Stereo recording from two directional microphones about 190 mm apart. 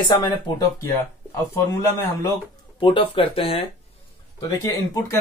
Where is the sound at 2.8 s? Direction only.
25° left (ahead or behind).